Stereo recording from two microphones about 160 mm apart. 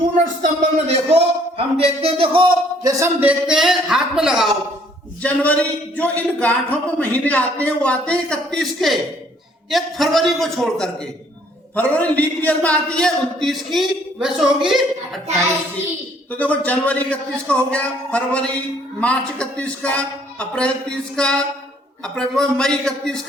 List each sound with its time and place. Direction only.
0.4 s speech: 45° right (ahead or behind)
2.8 s a man's voice: 15° right (ahead or behind)
5.2 s a man's voice: 10° left (ahead or behind)
16.3 s a man's voice: 10° left (ahead or behind)